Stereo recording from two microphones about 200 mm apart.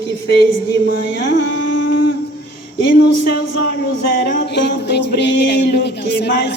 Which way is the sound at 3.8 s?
55° left (ahead or behind).